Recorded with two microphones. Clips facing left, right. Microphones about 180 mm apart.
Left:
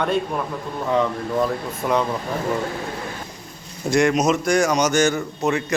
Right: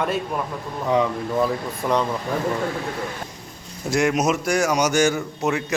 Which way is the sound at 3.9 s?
5° right (ahead or behind).